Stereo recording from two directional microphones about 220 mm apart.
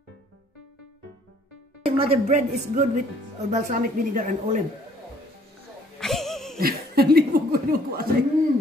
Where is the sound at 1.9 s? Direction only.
25° right (ahead or behind).